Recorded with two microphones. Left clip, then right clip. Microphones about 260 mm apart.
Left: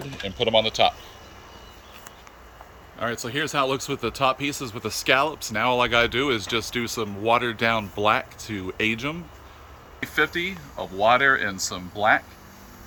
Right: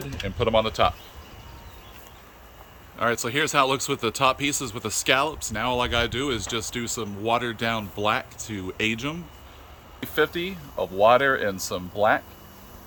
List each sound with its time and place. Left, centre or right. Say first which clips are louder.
0.3 s speech: left 1 dB; centre
3.0 s speech: right 3 dB; centre
10.2 s speech: left 1 dB; right